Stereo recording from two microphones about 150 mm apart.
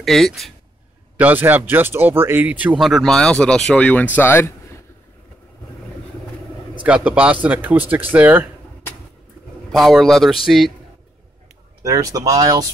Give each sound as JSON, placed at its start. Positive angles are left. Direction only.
{"t": 0.0, "sound": "speech", "side_deg": 0}
{"t": 1.1, "sound": "speech", "side_deg": -10}
{"t": 6.8, "sound": "speech", "side_deg": -10}
{"t": 9.7, "sound": "speech", "side_deg": 0}
{"t": 11.8, "sound": "speech", "side_deg": -20}